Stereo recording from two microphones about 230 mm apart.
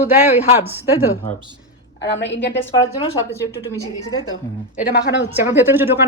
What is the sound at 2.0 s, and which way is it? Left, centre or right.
Speech, left.